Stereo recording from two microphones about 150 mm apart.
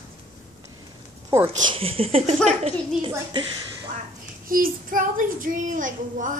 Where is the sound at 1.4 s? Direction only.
35° right (ahead or behind).